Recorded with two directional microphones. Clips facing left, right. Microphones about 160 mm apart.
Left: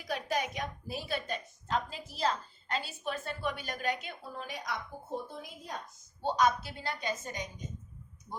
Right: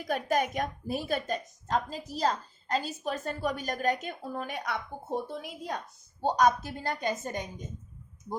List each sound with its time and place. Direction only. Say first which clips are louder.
0.0 s a woman's voice: right 5 dB; 50° right (ahead or behind)
5.4 s a woman's voice: right 6 dB; 70° right (ahead or behind)
6.2 s a woman's voice: right 4 dB; 45° right (ahead or behind)